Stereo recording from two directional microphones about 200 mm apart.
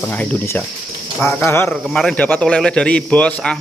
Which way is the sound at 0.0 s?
10° left (ahead or behind).